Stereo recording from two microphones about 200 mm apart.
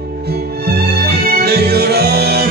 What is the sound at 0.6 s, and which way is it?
Music, 55° right (ahead or behind).